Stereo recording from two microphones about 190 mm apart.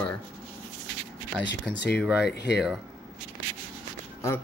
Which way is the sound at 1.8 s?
60° left (ahead or behind).